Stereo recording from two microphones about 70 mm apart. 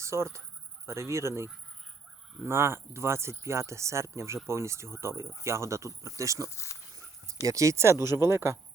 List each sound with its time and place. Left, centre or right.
0.0 s speech: right
6.4 s speech: left
7.4 s speech: right